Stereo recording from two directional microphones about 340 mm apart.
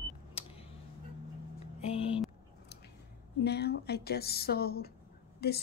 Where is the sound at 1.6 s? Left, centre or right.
Centre.